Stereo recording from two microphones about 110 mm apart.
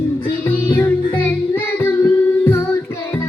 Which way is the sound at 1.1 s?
20° left (ahead or behind).